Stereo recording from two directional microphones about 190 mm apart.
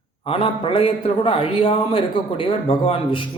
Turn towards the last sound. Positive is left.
turn(degrees=30)  # may be behind; listen again after turning